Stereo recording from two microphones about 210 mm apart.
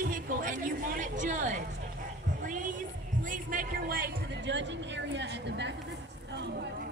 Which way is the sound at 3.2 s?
40° right (ahead or behind).